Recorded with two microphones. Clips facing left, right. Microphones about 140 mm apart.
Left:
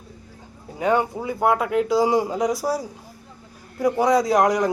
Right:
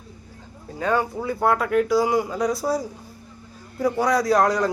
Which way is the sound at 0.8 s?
15° left (ahead or behind).